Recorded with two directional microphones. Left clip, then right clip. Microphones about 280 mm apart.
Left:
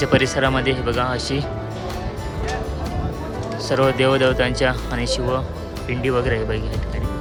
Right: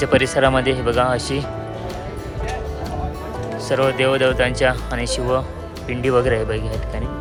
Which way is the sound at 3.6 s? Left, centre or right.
Centre.